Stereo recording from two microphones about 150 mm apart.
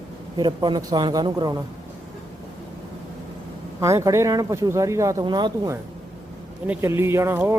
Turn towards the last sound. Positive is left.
turn(degrees=-15)  # may be behind; listen again after turning